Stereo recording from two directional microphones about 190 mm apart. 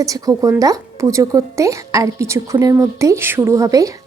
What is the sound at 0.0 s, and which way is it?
A woman's voice, 20° right (ahead or behind).